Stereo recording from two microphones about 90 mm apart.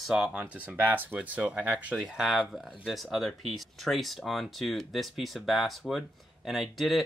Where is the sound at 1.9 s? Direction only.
5° right (ahead or behind).